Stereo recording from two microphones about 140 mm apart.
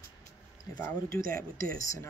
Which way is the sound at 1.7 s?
25° left (ahead or behind).